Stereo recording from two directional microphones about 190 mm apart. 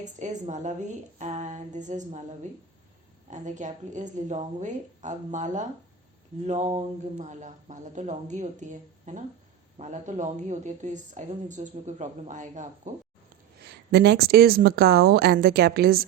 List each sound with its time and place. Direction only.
0.0 s a woman's voice: 40° right (ahead or behind)
13.7 s speech: 60° right (ahead or behind)